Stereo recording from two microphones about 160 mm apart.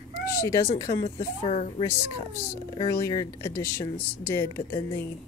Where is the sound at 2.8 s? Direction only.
20° left (ahead or behind).